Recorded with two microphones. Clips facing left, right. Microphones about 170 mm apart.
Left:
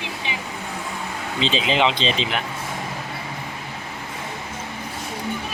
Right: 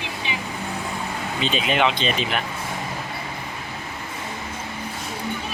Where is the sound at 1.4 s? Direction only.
25° left (ahead or behind).